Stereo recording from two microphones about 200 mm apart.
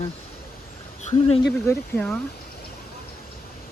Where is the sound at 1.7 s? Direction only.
5° left (ahead or behind).